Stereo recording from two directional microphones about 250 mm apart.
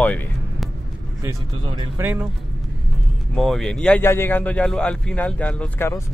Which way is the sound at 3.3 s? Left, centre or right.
Centre.